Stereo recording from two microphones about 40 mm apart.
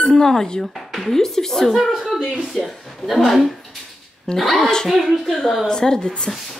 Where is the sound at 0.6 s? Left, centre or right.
Centre.